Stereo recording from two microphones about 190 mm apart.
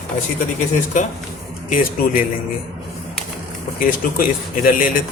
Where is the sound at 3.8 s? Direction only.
45° left (ahead or behind).